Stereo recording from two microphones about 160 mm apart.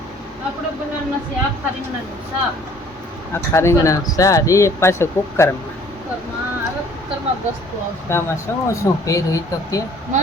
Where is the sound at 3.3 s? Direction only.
15° left (ahead or behind).